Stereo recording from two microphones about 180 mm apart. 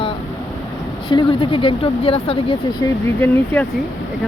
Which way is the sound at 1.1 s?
30° left (ahead or behind).